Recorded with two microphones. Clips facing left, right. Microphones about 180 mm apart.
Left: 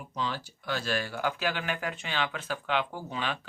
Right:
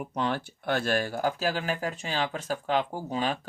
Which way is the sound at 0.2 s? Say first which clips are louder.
Right 4 dB; 60° right (ahead or behind).